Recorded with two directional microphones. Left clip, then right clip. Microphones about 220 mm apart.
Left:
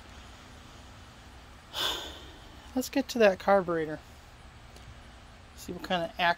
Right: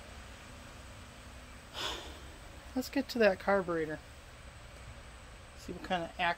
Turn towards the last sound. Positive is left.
turn(degrees=40)  # may be behind; listen again after turning